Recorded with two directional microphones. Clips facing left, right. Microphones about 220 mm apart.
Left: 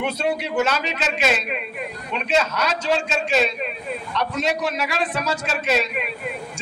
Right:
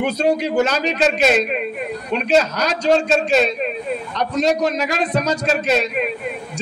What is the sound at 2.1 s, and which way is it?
A man's voice, 35° right (ahead or behind).